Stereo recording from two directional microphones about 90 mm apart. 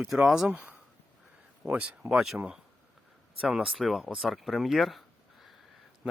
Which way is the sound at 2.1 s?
5° right (ahead or behind).